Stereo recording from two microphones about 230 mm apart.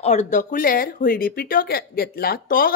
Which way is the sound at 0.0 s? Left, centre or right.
Left.